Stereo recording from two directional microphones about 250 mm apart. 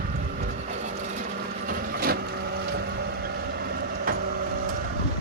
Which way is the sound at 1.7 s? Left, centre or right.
Right.